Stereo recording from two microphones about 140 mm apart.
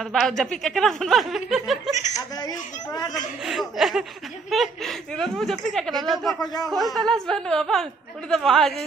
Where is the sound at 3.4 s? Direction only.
Centre (ahead or behind).